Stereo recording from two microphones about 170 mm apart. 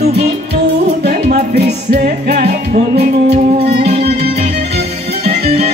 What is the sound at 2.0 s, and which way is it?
Music, 65° right (ahead or behind).